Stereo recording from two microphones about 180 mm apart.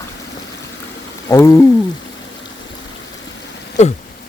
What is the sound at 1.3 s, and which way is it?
Speech, 15° left (ahead or behind).